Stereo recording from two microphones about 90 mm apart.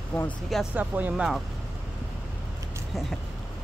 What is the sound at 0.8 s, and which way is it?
Speech, 15° right (ahead or behind).